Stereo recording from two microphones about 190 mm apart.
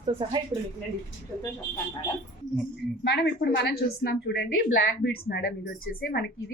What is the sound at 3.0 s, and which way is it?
A woman's voice, 60° left (ahead or behind).